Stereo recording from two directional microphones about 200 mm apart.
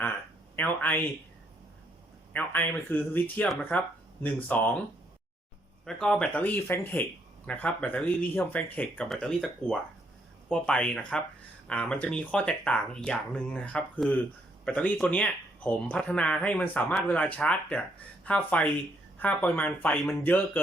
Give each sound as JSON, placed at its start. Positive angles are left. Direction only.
{"t": 0.5, "sound": "speech", "side_deg": 10}
{"t": 2.3, "sound": "speech", "side_deg": 10}
{"t": 5.8, "sound": "speech", "side_deg": 5}